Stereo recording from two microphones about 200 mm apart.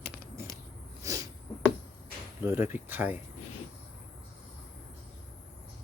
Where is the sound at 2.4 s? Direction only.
10° right (ahead or behind).